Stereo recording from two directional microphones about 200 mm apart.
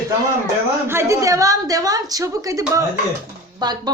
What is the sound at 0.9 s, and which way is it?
A woman's voice, 15° right (ahead or behind).